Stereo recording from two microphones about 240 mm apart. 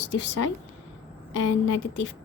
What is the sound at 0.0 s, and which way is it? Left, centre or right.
Speech, left.